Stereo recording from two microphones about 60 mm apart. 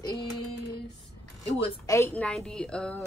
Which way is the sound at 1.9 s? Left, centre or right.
Left.